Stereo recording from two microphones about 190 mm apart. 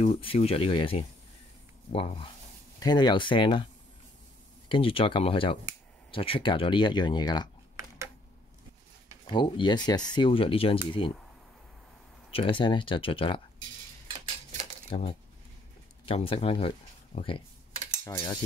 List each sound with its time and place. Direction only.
0.0 s speech: 30° left (ahead or behind)
4.6 s speech: 25° left (ahead or behind)
9.2 s speech: 25° left (ahead or behind)
12.3 s speech: 30° left (ahead or behind)
14.0 s a sound: 30° right (ahead or behind)
14.9 s speech: 30° left (ahead or behind)
18.0 s cutlery: 15° left (ahead or behind)